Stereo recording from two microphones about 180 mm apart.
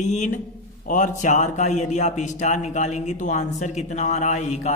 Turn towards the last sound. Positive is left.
turn(degrees=40)  # may be behind; listen again after turning